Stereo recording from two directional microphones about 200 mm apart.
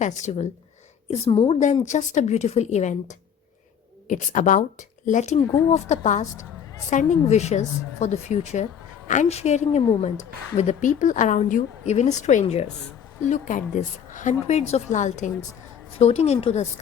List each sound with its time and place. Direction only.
0.0 s a woman's voice: 35° left (ahead or behind)
5.5 s speech: 10° left (ahead or behind)
5.7 s a woman's voice: 35° left (ahead or behind)